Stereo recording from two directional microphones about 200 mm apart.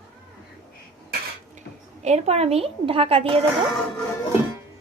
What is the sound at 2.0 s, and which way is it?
Speech, 35° right (ahead or behind).